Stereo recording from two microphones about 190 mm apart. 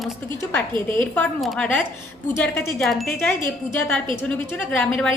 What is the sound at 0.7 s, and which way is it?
Speech, 25° right (ahead or behind).